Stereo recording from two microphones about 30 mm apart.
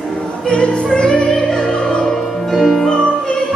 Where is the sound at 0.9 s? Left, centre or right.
Left.